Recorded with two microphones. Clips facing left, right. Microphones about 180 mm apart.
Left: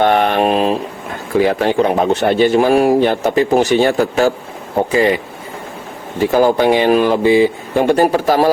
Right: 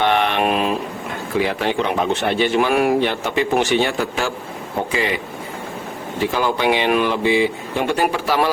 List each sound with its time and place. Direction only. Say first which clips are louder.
0.0 s speech: left 5 dB; 45° left (ahead or behind)
6.3 s speech: left 8 dB; 40° left (ahead or behind)